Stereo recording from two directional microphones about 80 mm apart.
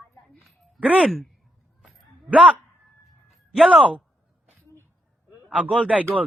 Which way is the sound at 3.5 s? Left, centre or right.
Centre.